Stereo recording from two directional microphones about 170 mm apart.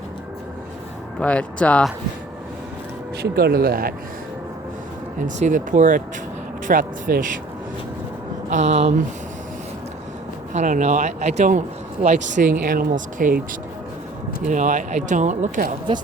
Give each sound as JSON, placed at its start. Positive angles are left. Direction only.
{"t": 1.2, "sound": "speech", "side_deg": 5}
{"t": 3.2, "sound": "speech", "side_deg": -70}
{"t": 5.2, "sound": "speech", "side_deg": -50}
{"t": 8.4, "sound": "speech", "side_deg": -45}
{"t": 10.5, "sound": "speech", "side_deg": -45}
{"t": 12.5, "sound": "speech", "side_deg": -55}
{"t": 14.4, "sound": "speech", "side_deg": -50}